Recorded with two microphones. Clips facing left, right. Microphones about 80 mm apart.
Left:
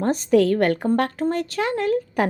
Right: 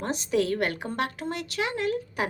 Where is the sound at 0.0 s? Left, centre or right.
Left.